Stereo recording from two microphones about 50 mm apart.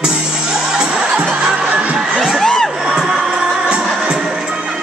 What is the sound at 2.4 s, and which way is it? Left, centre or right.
Crowd, centre.